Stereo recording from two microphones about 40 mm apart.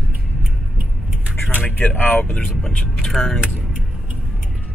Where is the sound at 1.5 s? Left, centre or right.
Left.